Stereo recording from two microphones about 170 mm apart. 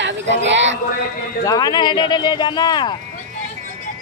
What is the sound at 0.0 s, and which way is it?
Speech, 90° right.